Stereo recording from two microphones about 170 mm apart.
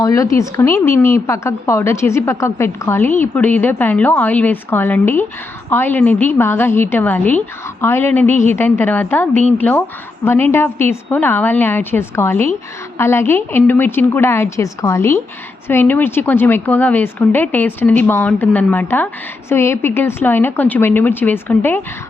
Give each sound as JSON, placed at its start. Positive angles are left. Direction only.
{"t": 0.0, "sound": "speech", "side_deg": 20}